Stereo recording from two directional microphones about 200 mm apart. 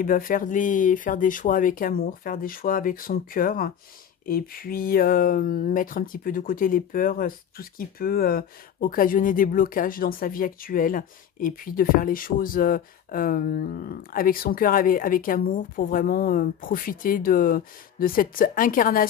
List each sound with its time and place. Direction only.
0.0 s speech: 45° left (ahead or behind)